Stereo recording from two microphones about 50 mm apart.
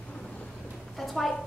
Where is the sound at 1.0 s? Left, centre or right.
Centre.